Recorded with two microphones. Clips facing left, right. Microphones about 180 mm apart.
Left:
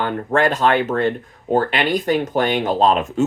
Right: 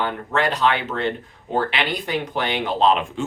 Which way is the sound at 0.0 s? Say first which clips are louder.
Left 4 dB; 50° left (ahead or behind).